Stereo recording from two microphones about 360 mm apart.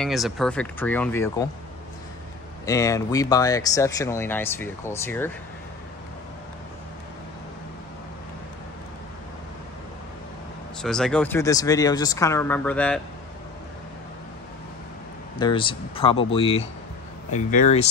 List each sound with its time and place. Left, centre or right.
0.0 s speech: centre
2.6 s speech: centre
10.8 s speech: centre
15.3 s speech: centre